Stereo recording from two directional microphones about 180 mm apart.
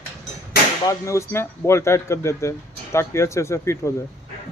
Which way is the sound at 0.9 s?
15° left (ahead or behind).